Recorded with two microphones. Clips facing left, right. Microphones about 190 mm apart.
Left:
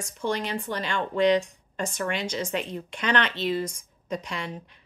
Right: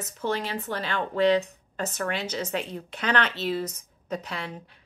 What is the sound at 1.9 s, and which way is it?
Speech, 5° right (ahead or behind).